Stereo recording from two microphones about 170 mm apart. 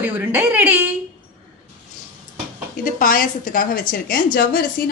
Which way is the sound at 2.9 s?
55° left (ahead or behind).